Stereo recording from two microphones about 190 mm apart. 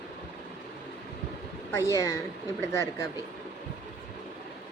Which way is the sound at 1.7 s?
15° left (ahead or behind).